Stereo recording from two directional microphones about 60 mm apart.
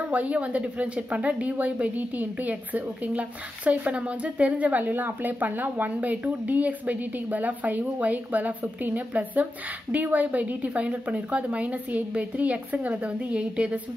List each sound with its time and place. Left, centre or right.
0.1 s speech: right